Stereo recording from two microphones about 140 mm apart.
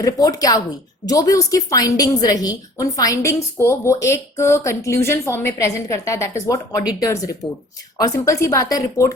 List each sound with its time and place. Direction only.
0.0 s a woman's voice: 25° left (ahead or behind)